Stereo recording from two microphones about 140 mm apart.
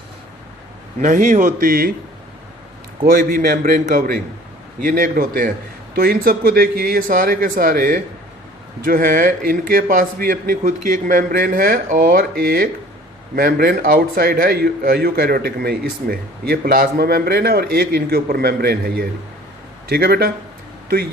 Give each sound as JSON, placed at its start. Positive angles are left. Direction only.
{"t": 0.9, "sound": "a man's voice", "side_deg": -60}
{"t": 3.1, "sound": "a man's voice", "side_deg": -90}
{"t": 8.8, "sound": "a man's voice", "side_deg": -90}